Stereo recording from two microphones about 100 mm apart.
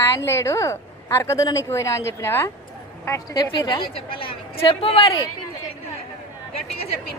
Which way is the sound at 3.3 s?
45° left (ahead or behind).